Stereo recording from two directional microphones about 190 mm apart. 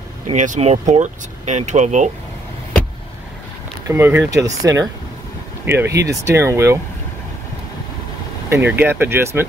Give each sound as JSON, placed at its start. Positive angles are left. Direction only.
{"t": 0.3, "sound": "speech", "side_deg": -40}
{"t": 3.8, "sound": "speech", "side_deg": -15}
{"t": 5.7, "sound": "speech", "side_deg": -15}
{"t": 8.5, "sound": "speech", "side_deg": -10}